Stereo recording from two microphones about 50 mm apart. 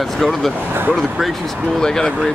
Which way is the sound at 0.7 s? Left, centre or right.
Right.